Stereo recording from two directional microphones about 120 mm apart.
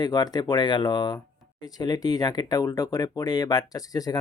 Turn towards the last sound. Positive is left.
turn(degrees=30)  # may be behind; listen again after turning